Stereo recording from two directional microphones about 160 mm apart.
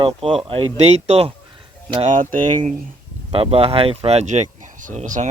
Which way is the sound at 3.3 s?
35° right (ahead or behind).